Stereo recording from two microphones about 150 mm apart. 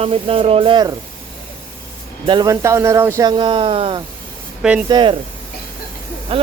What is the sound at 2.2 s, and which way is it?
Speech, 30° right (ahead or behind).